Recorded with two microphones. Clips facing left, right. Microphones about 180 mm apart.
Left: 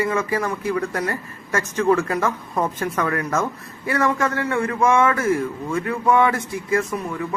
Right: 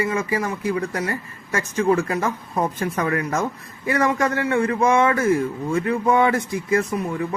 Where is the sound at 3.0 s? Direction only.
30° right (ahead or behind).